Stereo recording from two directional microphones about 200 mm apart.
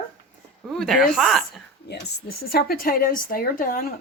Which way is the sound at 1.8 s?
55° left (ahead or behind).